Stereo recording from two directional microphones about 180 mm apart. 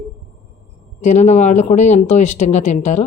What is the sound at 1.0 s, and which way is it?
A woman's voice, 40° left (ahead or behind).